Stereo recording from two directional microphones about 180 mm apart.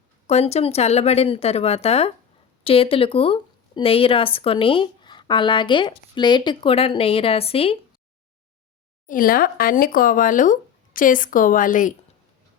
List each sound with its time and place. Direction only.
0.3 s a woman's voice: 35° left (ahead or behind)
9.0 s speech: 50° left (ahead or behind)